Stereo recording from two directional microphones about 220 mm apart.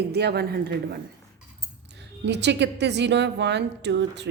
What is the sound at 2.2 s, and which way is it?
A woman's voice, 50° right (ahead or behind).